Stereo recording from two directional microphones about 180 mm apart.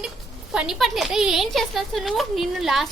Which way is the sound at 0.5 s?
5° right (ahead or behind).